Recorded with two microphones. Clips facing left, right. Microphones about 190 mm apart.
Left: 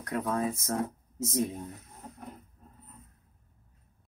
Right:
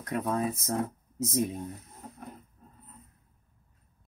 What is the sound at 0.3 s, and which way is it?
Speech, 15° right (ahead or behind).